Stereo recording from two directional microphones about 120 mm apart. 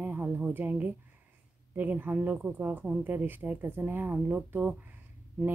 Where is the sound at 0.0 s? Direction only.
15° right (ahead or behind).